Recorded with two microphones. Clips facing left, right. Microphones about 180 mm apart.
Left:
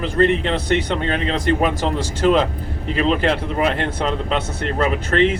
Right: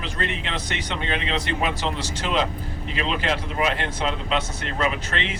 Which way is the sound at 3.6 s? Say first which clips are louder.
Left 4 dB; 55° left (ahead or behind).